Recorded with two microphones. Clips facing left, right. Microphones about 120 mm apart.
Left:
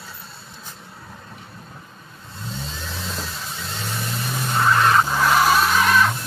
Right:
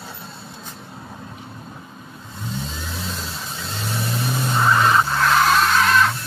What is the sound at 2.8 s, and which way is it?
Vehicle, 10° right (ahead or behind).